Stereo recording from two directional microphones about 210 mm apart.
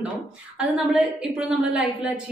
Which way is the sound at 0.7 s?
5° right (ahead or behind).